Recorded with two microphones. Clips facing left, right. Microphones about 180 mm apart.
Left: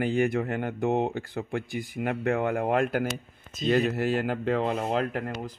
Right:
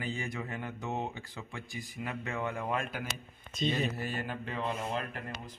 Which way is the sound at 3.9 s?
80° left.